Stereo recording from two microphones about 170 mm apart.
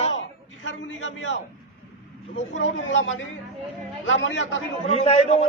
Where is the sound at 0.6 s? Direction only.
90° left.